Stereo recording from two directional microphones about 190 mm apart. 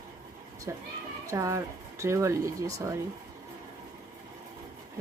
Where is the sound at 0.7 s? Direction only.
15° right (ahead or behind).